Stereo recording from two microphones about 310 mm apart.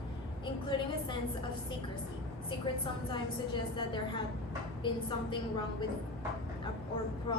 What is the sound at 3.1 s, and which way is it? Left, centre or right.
A woman's voice, centre.